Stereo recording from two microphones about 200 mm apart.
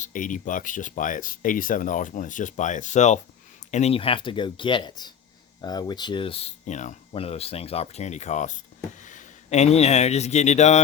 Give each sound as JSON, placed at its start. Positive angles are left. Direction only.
{"t": 0.0, "sound": "a man's voice", "side_deg": 40}